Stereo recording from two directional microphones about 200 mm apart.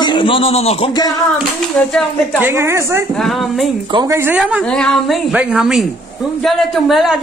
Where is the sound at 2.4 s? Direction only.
15° right (ahead or behind).